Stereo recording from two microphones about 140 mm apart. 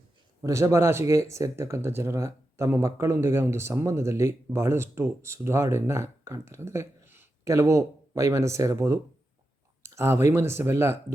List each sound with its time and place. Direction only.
0.4 s speech: 20° right (ahead or behind)